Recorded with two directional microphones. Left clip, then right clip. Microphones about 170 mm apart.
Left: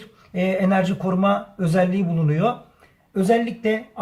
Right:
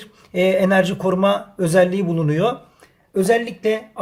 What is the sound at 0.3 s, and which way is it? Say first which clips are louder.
Speech: right 5 dB; 50° right (ahead or behind).